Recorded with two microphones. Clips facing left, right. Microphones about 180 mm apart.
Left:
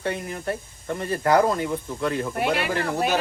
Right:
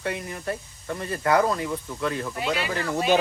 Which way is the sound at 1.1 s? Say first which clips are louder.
Left 2 dB; 30° left (ahead or behind).